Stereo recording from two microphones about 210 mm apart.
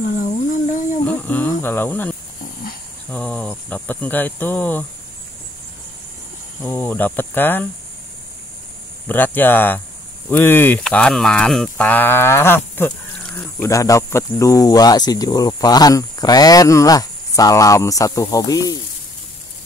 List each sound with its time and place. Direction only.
0.0 s a sound: 40° left (ahead or behind)
1.0 s speech: 10° left (ahead or behind)
6.6 s speech: 10° left (ahead or behind)
9.0 s speech: 10° left (ahead or behind)